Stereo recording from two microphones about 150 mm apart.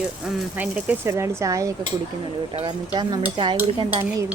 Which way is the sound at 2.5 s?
35° right (ahead or behind).